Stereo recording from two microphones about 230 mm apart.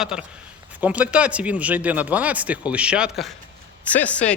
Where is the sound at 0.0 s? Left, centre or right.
Centre.